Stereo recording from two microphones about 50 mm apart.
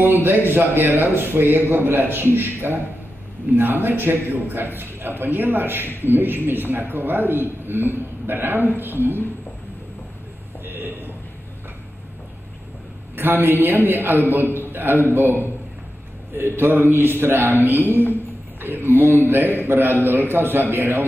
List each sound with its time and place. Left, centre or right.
0.0 s a man's voice: right
10.6 s a sound: right
13.1 s a man's voice: right
16.3 s a man's voice: right
17.9 s a woman's voice: left
18.6 s a man's voice: right